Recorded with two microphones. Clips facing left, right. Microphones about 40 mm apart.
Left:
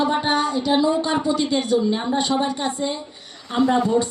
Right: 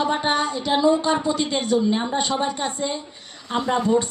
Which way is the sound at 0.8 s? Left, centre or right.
Right.